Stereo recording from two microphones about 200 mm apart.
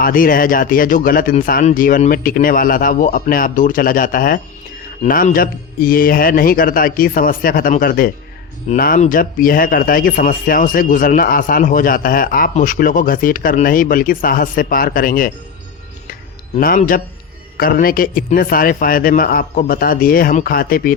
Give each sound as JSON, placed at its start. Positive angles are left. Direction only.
{"t": 0.0, "sound": "a man's voice", "side_deg": 45}
{"t": 16.6, "sound": "a man's voice", "side_deg": 45}